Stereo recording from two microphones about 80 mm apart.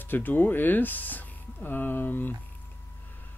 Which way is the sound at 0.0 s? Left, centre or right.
Left.